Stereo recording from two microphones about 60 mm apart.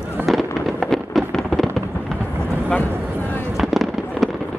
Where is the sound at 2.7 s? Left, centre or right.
Left.